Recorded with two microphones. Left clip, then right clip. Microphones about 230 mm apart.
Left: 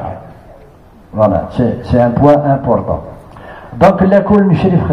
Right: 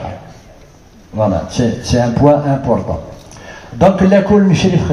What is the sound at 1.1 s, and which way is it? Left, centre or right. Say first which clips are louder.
A man's voice: left 4 dB; right.